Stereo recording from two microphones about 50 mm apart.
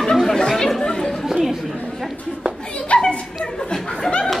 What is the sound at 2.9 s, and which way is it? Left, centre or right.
Children playing, left.